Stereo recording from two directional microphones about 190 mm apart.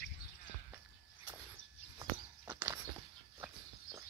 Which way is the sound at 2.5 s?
10° right (ahead or behind).